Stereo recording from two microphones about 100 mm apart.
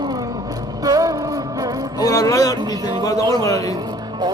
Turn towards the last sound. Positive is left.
turn(degrees=-45)  # may be behind; listen again after turning